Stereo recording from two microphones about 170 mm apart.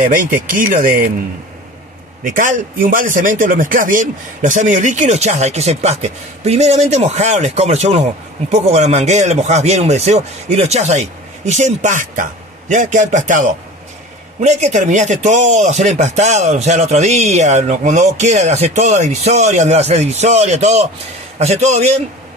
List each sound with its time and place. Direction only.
0.5 s speech: 55° right (ahead or behind)
2.2 s speech: 50° right (ahead or behind)